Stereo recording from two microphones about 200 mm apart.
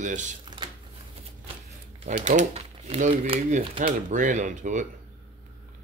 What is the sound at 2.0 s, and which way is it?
Speech, 35° right (ahead or behind).